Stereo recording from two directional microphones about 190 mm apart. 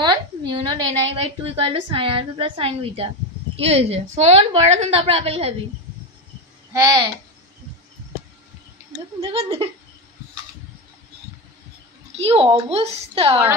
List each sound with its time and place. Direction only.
0.0 s a sound: 25° right (ahead or behind)
1.1 s a woman's voice: 30° right (ahead or behind)
6.7 s a child's voice: 20° right (ahead or behind)
9.2 s a woman's voice: 30° right (ahead or behind)
12.2 s a woman's voice: 30° right (ahead or behind)